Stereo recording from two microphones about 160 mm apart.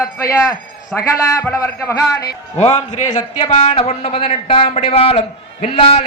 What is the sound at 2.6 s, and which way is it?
A man's voice, 45° left (ahead or behind).